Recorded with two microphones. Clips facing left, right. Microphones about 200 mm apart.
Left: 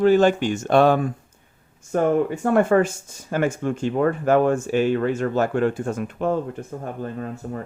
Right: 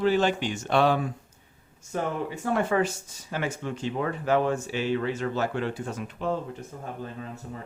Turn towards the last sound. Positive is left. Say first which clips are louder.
# left 8 dB
turn(degrees=55)  # may be behind; listen again after turning